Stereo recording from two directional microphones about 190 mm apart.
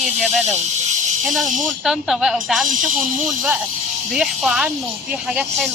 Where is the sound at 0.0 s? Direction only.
Centre (ahead or behind).